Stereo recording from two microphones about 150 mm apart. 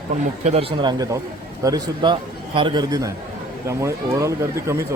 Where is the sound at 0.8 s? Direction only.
25° right (ahead or behind).